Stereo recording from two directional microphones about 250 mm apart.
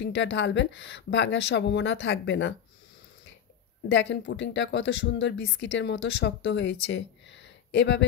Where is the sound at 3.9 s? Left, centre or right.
Left.